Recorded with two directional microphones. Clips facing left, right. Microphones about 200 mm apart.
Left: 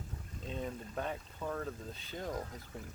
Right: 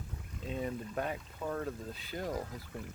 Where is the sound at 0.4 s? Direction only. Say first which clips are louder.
Right 4 dB; 5° right (ahead or behind).